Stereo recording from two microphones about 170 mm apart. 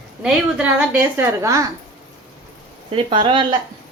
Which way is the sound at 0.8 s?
15° right (ahead or behind).